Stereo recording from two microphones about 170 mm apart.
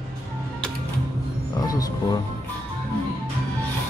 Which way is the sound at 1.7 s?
20° left (ahead or behind).